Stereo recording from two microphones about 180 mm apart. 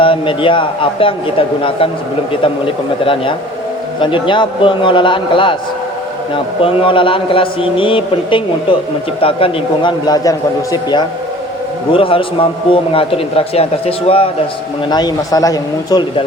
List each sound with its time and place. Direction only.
0.0 s a man's voice: 30° left (ahead or behind)